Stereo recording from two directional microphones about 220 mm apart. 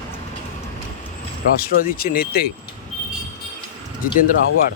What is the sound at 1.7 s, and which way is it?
Speech, 40° left (ahead or behind).